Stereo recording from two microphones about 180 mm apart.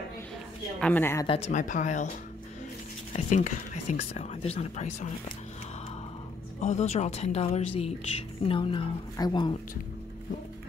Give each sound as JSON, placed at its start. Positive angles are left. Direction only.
{"t": 0.7, "sound": "speech", "side_deg": 10}
{"t": 1.2, "sound": "speech", "side_deg": 35}
{"t": 3.1, "sound": "speech", "side_deg": 45}
{"t": 6.6, "sound": "a woman's voice", "side_deg": 40}